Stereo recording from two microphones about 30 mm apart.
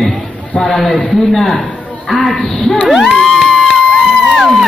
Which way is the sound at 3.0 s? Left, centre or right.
Centre.